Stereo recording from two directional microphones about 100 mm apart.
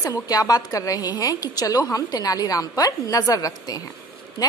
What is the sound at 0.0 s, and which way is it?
A woman's voice, 40° left (ahead or behind).